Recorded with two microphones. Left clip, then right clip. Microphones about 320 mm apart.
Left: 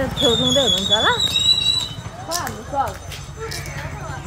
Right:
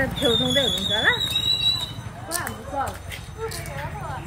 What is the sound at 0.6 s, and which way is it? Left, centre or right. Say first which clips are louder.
Speech: left 5 dB; centre.